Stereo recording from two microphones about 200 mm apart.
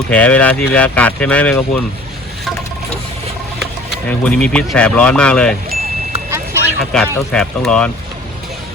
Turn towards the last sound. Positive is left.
turn(degrees=5)  # may be behind; listen again after turning